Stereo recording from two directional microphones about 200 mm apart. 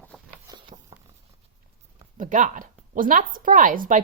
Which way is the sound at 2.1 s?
40° right (ahead or behind).